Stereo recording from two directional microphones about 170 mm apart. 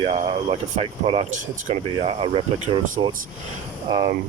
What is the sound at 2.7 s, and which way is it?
Insect, 30° right (ahead or behind).